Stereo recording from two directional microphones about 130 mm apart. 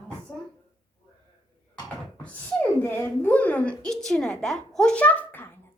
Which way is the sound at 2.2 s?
10° left (ahead or behind).